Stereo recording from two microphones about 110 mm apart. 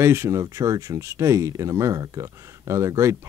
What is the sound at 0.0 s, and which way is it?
Speech, 25° right (ahead or behind).